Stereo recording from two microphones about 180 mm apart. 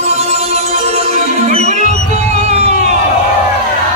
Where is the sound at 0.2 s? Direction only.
35° right (ahead or behind).